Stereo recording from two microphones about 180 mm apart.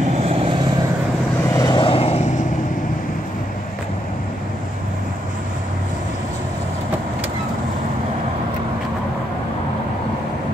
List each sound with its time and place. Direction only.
0.2 s vehicle: 30° right (ahead or behind)
1.5 s vehicle: 25° left (ahead or behind)